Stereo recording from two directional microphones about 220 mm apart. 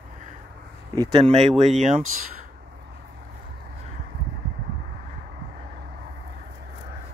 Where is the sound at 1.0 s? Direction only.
25° right (ahead or behind).